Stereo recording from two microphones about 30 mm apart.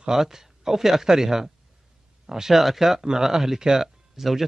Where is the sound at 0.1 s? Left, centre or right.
Centre.